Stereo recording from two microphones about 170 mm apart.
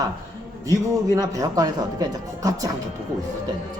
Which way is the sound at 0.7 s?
20° right (ahead or behind).